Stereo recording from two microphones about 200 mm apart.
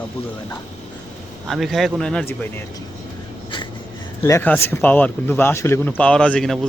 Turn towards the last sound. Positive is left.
turn(degrees=5)  # may be behind; listen again after turning